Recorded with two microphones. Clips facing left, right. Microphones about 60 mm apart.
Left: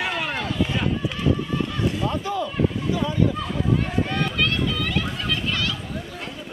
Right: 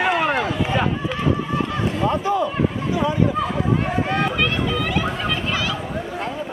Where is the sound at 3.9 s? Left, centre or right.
Centre.